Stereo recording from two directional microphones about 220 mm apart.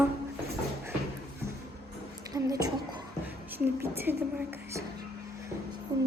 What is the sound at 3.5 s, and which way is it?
Speech, 10° right (ahead or behind).